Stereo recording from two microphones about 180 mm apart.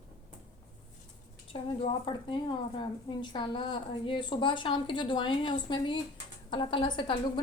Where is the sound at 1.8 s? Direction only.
25° left (ahead or behind).